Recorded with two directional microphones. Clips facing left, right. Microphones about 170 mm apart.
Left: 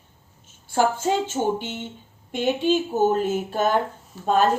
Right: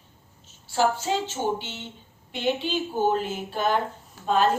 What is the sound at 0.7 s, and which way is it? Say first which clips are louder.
A woman's voice: left 3 dB; 50° left (ahead or behind).